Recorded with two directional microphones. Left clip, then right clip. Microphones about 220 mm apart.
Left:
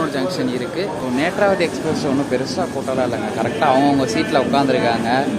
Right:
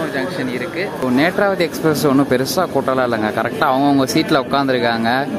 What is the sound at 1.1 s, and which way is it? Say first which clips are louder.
A man's voice: right 1 dB; 25° right (ahead or behind).